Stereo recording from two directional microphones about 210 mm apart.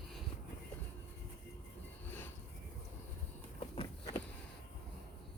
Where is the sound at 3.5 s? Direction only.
25° left (ahead or behind).